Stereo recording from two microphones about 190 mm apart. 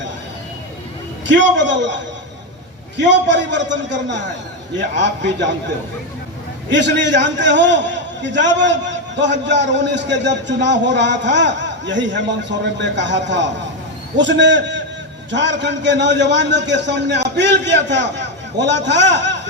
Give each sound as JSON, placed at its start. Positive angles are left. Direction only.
{"t": 1.3, "sound": "a man's voice", "side_deg": -70}
{"t": 3.0, "sound": "a man's voice", "side_deg": -70}
{"t": 6.7, "sound": "a man's voice", "side_deg": -70}